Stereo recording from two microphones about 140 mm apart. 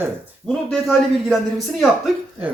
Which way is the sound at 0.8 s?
Centre (ahead or behind).